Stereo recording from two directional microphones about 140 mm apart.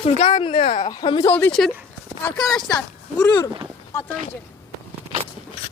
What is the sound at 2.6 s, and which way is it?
Speech, 25° left (ahead or behind).